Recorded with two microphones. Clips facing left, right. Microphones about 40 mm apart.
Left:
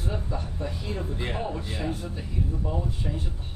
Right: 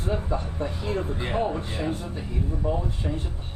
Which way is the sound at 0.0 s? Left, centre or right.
Right.